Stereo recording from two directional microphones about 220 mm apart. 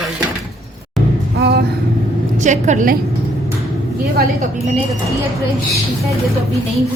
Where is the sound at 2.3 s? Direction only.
35° right (ahead or behind).